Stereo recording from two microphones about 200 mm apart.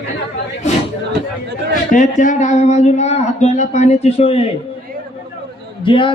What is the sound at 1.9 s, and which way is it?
Speech, 40° left (ahead or behind).